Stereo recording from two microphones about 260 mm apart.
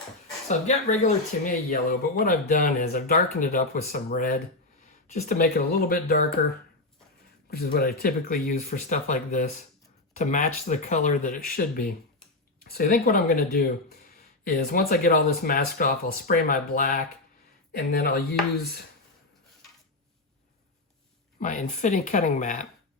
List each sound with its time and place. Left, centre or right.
0.4 s speech: left
7.5 s speech: left
21.3 s speech: left